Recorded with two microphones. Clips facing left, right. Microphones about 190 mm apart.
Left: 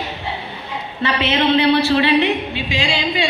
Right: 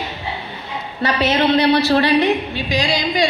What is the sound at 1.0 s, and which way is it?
A woman's voice, 40° right (ahead or behind).